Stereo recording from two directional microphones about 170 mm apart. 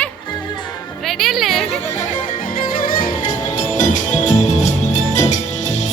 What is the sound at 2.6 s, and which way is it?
Music, 55° left (ahead or behind).